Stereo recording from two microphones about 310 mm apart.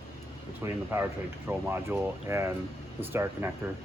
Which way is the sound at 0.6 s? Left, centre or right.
Centre.